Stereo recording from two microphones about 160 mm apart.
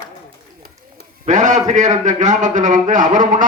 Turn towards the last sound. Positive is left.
turn(degrees=-55)  # may be behind; listen again after turning